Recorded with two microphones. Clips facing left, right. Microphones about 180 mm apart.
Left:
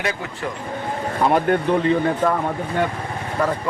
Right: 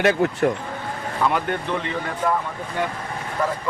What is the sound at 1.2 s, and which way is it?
Speech, 40° left (ahead or behind).